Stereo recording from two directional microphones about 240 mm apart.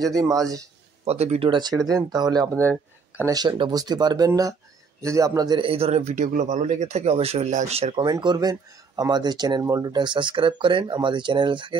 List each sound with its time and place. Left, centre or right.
0.0 s speech: centre
1.0 s speech: right
2.5 s speech: centre
3.2 s speech: centre